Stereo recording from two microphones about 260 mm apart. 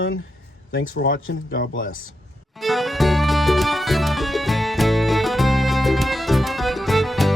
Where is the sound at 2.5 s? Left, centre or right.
Centre.